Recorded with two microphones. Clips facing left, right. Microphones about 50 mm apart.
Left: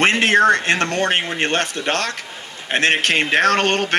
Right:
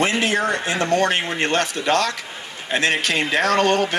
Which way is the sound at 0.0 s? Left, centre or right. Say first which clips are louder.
Left 5 dB; left.